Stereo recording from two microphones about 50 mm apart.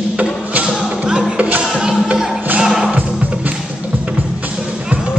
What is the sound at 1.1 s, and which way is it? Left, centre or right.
Music, centre.